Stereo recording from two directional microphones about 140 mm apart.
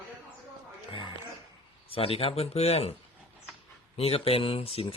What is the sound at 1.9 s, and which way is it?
A man's voice, 45° left (ahead or behind).